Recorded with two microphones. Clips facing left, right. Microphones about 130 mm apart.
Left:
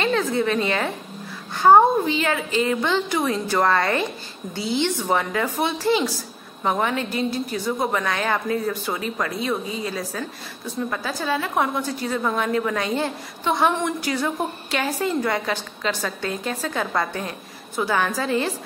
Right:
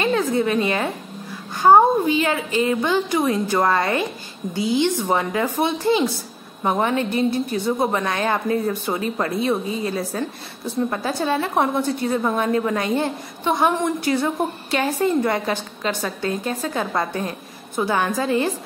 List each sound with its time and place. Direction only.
0.0 s a woman's voice: 15° right (ahead or behind)